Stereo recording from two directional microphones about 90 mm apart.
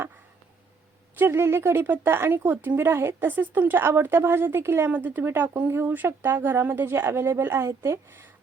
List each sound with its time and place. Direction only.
1.2 s speech: 25° right (ahead or behind)